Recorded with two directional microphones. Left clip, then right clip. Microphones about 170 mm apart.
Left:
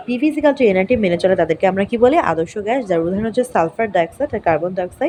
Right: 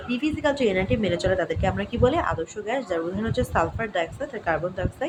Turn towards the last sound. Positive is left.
turn(degrees=40)  # may be behind; listen again after turning